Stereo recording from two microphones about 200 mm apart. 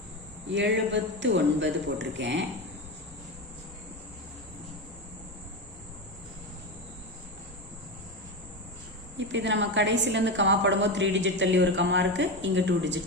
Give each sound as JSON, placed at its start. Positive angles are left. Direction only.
{"t": 0.4, "sound": "a woman's voice", "side_deg": -65}
{"t": 9.1, "sound": "a woman's voice", "side_deg": -65}